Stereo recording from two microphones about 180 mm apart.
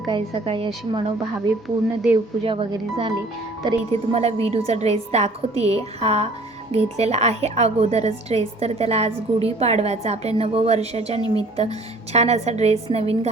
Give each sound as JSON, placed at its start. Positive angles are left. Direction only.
{"t": 0.1, "sound": "a woman's voice", "side_deg": -30}
{"t": 1.6, "sound": "speech", "side_deg": 0}
{"t": 2.4, "sound": "a woman's voice", "side_deg": -30}
{"t": 4.1, "sound": "a woman's voice", "side_deg": -35}